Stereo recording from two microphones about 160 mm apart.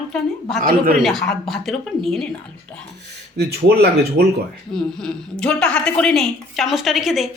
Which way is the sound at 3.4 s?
80° right.